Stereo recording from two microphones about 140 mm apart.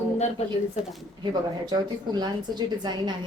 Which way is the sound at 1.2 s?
30° right (ahead or behind).